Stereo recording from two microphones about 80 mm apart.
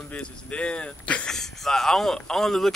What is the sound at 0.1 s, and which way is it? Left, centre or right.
Speech, centre.